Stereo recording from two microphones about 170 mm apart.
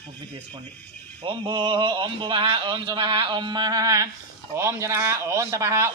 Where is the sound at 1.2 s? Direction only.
30° right (ahead or behind).